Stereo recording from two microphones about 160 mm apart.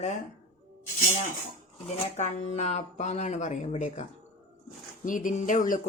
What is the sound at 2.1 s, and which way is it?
Speech, 50° left (ahead or behind).